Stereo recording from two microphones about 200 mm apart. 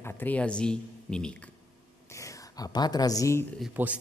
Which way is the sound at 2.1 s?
15° left (ahead or behind).